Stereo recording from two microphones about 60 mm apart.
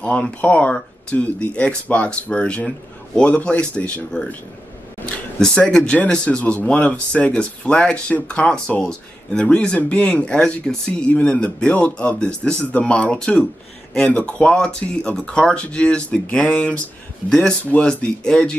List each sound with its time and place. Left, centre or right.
0.0 s speech: left
5.4 s speech: centre